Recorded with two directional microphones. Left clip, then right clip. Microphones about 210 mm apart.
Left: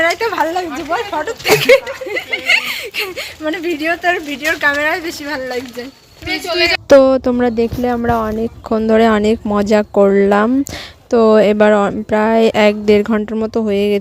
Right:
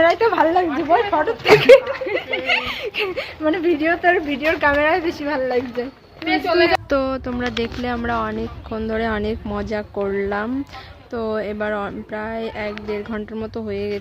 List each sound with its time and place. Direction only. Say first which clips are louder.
0.0 s speech: even; 10° left (ahead or behind)
6.8 s speech: left 13 dB; 40° left (ahead or behind)